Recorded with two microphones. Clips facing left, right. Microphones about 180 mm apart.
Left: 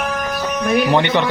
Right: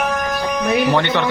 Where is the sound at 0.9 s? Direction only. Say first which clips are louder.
Left 2 dB; 15° left (ahead or behind).